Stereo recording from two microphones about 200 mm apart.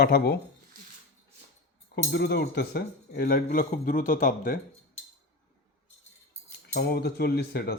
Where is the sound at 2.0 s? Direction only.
55° left (ahead or behind).